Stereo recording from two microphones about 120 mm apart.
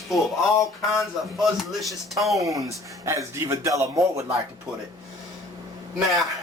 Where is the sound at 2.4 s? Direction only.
30° right (ahead or behind).